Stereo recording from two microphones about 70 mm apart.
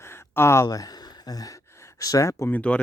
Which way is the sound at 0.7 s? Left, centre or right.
Left.